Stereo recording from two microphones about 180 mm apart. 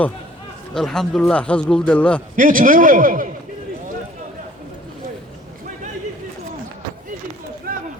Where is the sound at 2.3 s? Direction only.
50° right (ahead or behind).